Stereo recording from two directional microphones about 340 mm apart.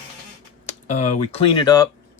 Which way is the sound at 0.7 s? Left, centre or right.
Centre.